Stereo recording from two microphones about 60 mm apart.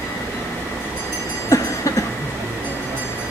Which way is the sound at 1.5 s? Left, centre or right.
Left.